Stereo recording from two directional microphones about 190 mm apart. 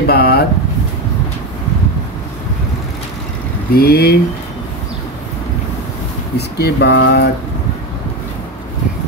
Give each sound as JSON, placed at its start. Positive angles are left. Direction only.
{"t": 0.0, "sound": "a sound", "side_deg": 55}
{"t": 3.7, "sound": "speech", "side_deg": 55}
{"t": 6.3, "sound": "speech", "side_deg": 60}